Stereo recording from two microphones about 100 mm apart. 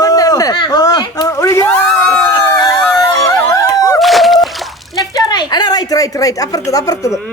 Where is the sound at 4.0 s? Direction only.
Centre (ahead or behind).